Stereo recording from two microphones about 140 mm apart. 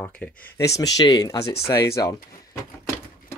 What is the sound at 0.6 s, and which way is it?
Speech, 25° left (ahead or behind).